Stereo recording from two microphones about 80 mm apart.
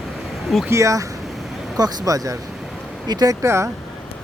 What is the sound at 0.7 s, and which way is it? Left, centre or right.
Speech, right.